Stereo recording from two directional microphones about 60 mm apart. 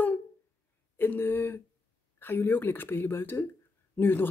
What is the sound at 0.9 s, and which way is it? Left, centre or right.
Speech, left.